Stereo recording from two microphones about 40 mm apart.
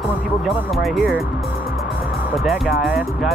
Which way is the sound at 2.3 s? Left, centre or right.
Centre.